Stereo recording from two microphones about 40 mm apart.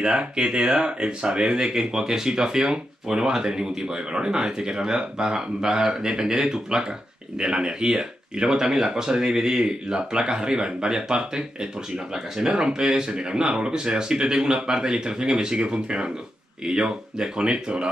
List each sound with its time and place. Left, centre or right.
0.0 s speech: right